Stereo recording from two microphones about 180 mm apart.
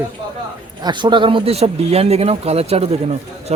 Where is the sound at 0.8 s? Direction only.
25° right (ahead or behind).